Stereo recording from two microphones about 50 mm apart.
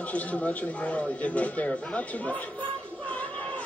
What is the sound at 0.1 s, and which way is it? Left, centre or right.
Speech, left.